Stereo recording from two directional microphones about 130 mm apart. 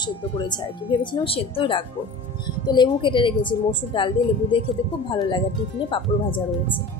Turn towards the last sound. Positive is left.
turn(degrees=40)  # may be behind; listen again after turning